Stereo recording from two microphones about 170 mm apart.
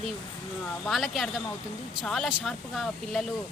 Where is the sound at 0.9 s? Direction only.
Centre (ahead or behind).